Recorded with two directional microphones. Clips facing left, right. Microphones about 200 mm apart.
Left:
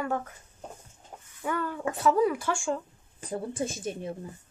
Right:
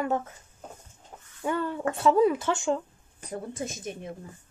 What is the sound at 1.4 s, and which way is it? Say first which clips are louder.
Speech: right 2 dB; 25° right (ahead or behind).